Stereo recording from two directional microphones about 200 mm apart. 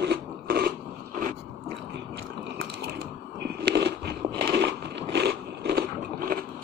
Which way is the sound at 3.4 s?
55° right (ahead or behind).